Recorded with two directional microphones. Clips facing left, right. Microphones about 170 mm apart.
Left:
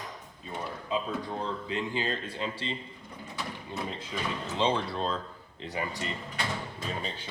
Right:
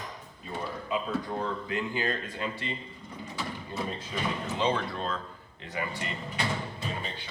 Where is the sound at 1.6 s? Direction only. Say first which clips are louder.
Right 1 dB; 30° left (ahead or behind).